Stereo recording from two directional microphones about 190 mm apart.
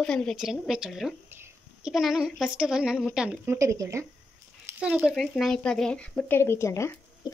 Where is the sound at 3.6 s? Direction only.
15° right (ahead or behind).